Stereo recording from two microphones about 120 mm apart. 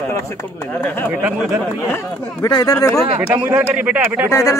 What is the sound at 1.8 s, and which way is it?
Speech, 20° left (ahead or behind).